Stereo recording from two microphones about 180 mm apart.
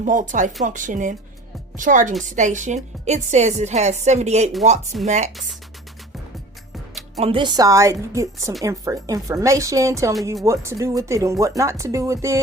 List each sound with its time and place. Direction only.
0.0 s a woman's voice: 45° right (ahead or behind)
5.3 s speech: centre (ahead or behind)
7.2 s speech: 30° right (ahead or behind)